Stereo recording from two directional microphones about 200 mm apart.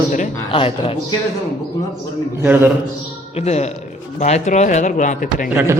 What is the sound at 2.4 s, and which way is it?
Speech, 10° right (ahead or behind).